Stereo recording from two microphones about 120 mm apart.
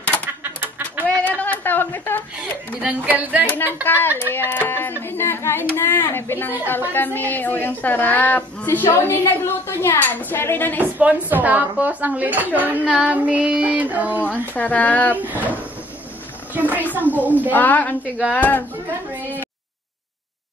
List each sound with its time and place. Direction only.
0.4 s a sound: 15° right (ahead or behind)
1.0 s a sound: 15° left (ahead or behind)
2.8 s a woman's voice: 15° right (ahead or behind)
3.4 s a woman's voice: 15° left (ahead or behind)
10.8 s a woman's voice: 10° right (ahead or behind)
14.5 s a woman's voice: 15° left (ahead or behind)
15.1 s a woman's voice: 15° right (ahead or behind)
16.5 s a sound: 15° right (ahead or behind)
17.2 s a woman's voice: 15° right (ahead or behind)
17.5 s a woman's voice: 15° left (ahead or behind)